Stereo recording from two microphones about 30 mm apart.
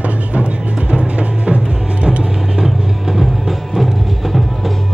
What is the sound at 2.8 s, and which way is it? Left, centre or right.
Music, centre.